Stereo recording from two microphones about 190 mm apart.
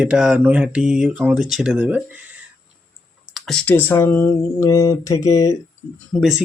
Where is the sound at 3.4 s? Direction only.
5° left (ahead or behind).